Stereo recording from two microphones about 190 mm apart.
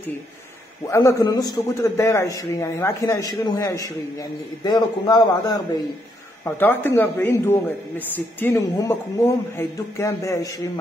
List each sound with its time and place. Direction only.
0.8 s a man's voice: 15° left (ahead or behind)
6.4 s a man's voice: 10° left (ahead or behind)